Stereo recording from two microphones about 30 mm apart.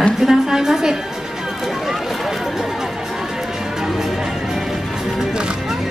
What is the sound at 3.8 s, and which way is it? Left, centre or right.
Music, centre.